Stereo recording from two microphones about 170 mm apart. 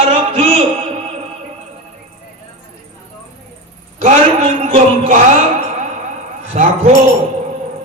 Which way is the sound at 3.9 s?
40° right (ahead or behind).